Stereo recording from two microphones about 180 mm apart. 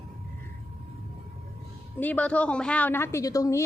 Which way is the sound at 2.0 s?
10° left (ahead or behind).